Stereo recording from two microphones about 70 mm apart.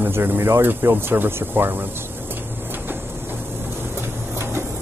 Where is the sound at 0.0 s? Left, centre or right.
Right.